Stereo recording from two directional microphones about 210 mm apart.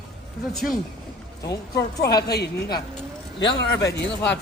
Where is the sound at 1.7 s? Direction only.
50° left (ahead or behind).